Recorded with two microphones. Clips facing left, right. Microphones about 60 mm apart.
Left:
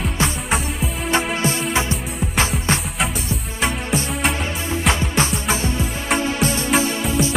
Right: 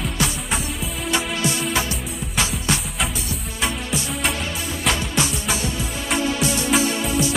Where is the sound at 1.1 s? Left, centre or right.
Left.